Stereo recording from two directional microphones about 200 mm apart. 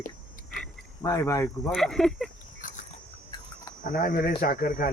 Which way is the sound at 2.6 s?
40° left (ahead or behind).